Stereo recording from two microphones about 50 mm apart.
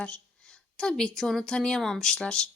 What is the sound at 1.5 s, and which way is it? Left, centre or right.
Speech, centre.